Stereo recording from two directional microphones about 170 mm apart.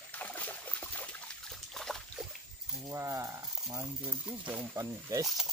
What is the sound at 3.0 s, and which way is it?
Speech, 20° right (ahead or behind).